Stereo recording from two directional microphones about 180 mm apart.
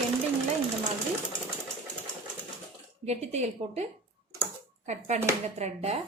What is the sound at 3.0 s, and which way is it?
A woman's voice, 35° right (ahead or behind).